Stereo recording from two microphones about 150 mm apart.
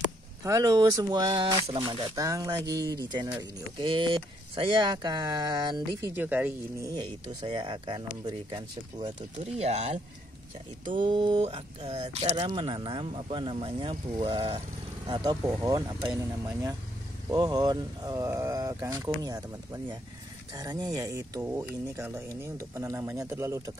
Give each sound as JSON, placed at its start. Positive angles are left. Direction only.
{"t": 0.4, "sound": "speech", "side_deg": -20}
{"t": 6.1, "sound": "speech", "side_deg": -10}
{"t": 7.4, "sound": "speech", "side_deg": -35}
{"t": 9.4, "sound": "speech", "side_deg": -45}
{"t": 11.0, "sound": "speech", "side_deg": -30}
{"t": 11.4, "sound": "speech", "side_deg": -45}
{"t": 17.3, "sound": "speech", "side_deg": -25}